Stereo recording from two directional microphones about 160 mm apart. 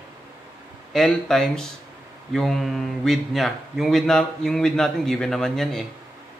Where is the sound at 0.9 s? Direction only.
Centre (ahead or behind).